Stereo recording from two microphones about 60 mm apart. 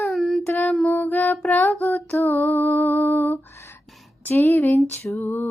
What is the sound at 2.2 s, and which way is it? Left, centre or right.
Lullaby, left.